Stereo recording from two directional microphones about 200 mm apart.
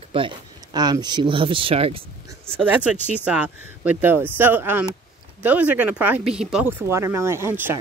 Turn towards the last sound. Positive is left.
turn(degrees=-10)  # may be behind; listen again after turning